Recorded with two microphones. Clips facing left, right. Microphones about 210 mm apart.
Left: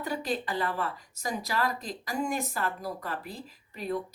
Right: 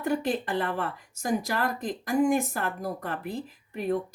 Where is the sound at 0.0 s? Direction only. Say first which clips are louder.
Right 5 dB; 55° right (ahead or behind).